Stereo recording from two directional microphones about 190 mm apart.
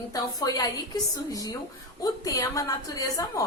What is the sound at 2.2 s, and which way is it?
A woman's voice, 20° left (ahead or behind).